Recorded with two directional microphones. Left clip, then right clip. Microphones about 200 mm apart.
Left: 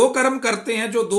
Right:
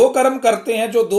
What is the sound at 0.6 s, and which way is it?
Speech, 55° left (ahead or behind).